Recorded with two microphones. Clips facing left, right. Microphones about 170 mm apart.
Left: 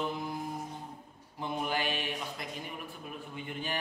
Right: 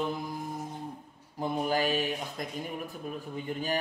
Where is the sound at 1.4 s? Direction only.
40° right (ahead or behind).